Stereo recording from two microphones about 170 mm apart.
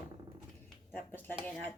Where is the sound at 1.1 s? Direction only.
10° left (ahead or behind).